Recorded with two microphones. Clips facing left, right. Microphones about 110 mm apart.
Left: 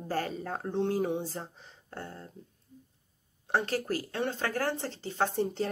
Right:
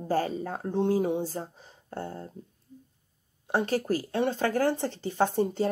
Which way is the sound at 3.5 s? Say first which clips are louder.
Right 3 dB; 15° right (ahead or behind).